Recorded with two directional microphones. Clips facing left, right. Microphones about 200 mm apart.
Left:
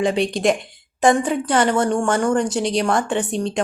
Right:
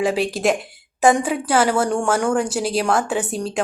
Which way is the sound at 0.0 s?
5° right (ahead or behind).